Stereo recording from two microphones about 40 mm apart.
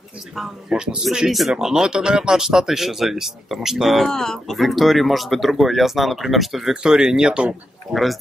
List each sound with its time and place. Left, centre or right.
0.7 s speech: centre
1.5 s speech: centre
4.1 s speech: centre
4.6 s speech: centre
6.7 s speech: centre
7.9 s speech: centre